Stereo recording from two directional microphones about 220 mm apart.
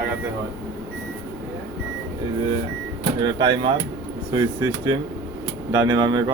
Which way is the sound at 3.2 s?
20° right (ahead or behind).